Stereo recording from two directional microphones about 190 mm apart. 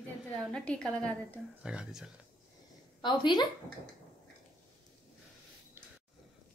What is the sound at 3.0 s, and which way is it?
Speech, 25° left (ahead or behind).